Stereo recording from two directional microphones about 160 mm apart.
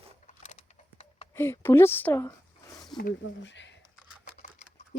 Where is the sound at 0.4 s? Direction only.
45° left (ahead or behind).